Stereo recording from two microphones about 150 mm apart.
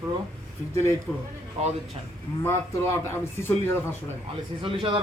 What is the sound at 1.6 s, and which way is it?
Speech, 40° right (ahead or behind).